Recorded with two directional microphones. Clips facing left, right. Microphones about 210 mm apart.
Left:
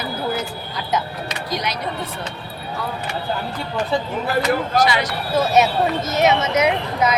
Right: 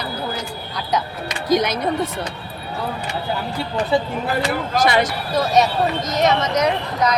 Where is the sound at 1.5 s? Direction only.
50° right (ahead or behind).